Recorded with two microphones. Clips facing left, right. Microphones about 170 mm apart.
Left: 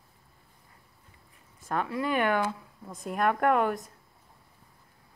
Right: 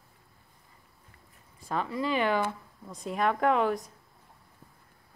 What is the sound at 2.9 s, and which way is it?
A woman's voice, centre (ahead or behind).